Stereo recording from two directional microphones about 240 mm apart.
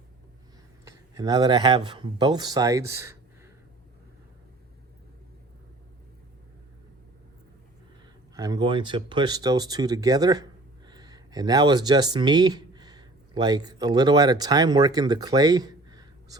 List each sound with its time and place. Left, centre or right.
0.9 s speech: centre
8.4 s speech: centre